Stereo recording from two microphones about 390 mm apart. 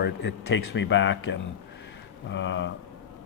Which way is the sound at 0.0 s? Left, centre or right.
Left.